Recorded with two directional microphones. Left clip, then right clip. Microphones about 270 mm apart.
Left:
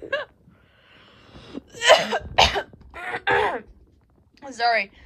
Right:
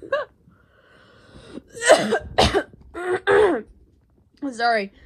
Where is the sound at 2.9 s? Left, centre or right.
Centre.